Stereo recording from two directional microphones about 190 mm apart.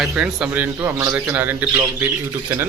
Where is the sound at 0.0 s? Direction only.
5° right (ahead or behind).